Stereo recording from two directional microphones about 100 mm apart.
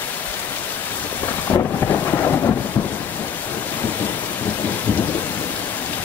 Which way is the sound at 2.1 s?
25° left (ahead or behind).